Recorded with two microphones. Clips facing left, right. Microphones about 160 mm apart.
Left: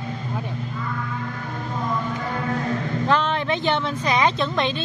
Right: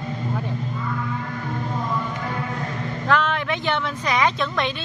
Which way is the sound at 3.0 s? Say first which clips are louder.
Right 1 dB; 25° left (ahead or behind).